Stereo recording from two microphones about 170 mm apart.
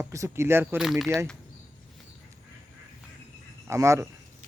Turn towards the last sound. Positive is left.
turn(degrees=-15)  # may be behind; listen again after turning